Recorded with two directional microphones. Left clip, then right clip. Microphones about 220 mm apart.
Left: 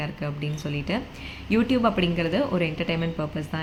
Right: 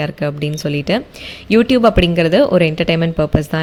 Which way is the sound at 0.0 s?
45° right (ahead or behind).